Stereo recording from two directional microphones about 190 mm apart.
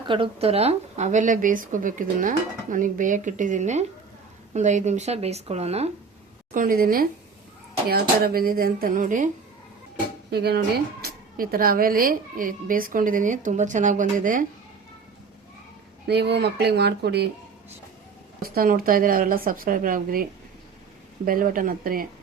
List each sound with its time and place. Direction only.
0.1 s speech: 30° right (ahead or behind)
6.5 s a woman's voice: 45° right (ahead or behind)
10.3 s a woman's voice: 55° right (ahead or behind)
16.0 s speech: 60° right (ahead or behind)
18.4 s a woman's voice: 50° right (ahead or behind)
21.2 s a woman's voice: 50° right (ahead or behind)